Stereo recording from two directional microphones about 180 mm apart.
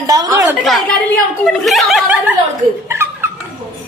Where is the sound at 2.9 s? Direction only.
15° right (ahead or behind).